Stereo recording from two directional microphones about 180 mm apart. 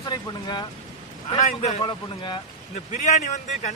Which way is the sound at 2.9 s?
45° left (ahead or behind).